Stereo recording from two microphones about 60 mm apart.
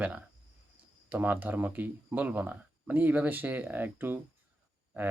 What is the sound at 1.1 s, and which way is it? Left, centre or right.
Speech, right.